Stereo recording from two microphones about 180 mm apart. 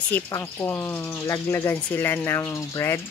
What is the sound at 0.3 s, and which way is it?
Speech, 15° left (ahead or behind).